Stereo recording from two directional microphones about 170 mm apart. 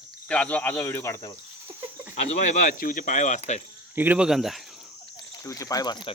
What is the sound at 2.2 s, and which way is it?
Speech, 45° left (ahead or behind).